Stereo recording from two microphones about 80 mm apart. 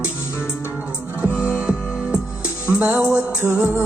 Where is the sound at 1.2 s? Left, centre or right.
Centre.